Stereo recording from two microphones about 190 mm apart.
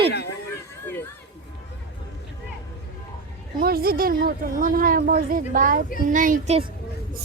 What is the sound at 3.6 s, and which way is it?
Speech, 50° right (ahead or behind).